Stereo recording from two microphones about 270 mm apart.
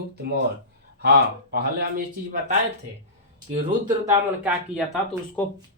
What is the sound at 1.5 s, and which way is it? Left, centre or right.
Speech, right.